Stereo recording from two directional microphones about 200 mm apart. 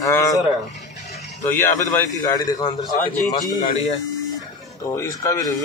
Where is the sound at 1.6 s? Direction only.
15° left (ahead or behind).